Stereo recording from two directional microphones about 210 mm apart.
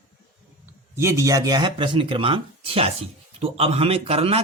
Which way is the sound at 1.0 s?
15° right (ahead or behind).